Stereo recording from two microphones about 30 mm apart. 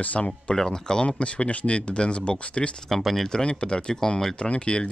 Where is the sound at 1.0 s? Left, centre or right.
Left.